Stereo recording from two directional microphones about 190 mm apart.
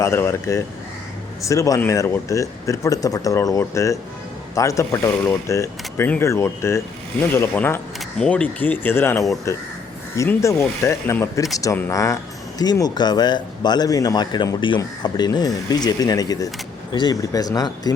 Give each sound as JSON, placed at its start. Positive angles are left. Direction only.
{"t": 0.0, "sound": "speech", "side_deg": 15}